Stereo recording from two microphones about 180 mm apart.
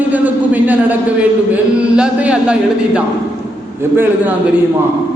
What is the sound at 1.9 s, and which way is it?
Speech, 5° right (ahead or behind).